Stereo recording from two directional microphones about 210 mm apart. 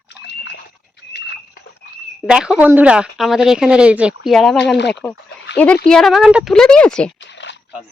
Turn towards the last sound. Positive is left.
turn(degrees=5)  # may be behind; listen again after turning